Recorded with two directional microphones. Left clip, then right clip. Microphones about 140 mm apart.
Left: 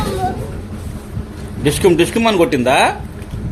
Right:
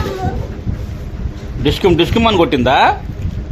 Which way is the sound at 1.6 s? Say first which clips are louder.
Even; 15° right (ahead or behind).